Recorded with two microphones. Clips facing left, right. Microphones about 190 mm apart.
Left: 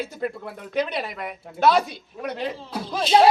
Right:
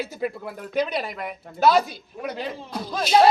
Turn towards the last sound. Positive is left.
turn(degrees=5)  # may be behind; listen again after turning